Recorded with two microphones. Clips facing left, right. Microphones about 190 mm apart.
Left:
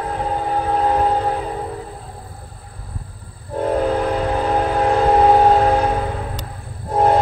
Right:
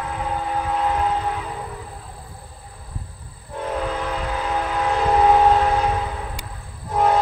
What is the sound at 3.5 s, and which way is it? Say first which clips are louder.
Train: left 7 dB; 40° left (ahead or behind).